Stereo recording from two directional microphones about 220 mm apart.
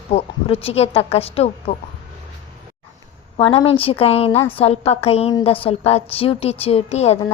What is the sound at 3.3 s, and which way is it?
A woman's voice, 25° left (ahead or behind).